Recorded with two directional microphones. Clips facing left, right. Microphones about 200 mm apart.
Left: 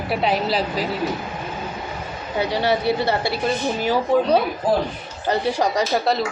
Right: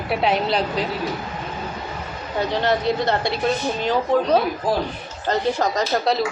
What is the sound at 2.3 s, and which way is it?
A woman's voice, 10° left (ahead or behind).